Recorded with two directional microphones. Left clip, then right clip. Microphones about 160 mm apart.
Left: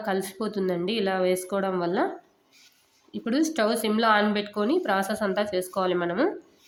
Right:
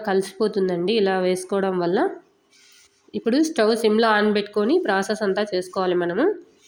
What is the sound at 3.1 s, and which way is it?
A woman's voice, 15° right (ahead or behind).